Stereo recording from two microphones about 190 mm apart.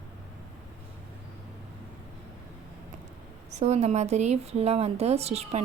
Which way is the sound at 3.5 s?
35° right (ahead or behind).